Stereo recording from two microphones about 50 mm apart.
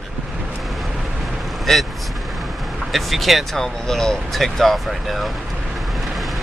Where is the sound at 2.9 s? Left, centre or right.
Centre.